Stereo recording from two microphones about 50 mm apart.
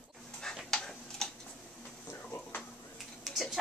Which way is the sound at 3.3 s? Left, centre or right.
Centre.